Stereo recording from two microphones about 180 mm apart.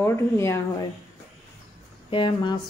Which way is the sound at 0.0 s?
15° left (ahead or behind).